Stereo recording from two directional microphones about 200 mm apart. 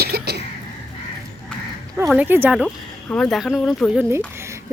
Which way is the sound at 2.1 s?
10° right (ahead or behind).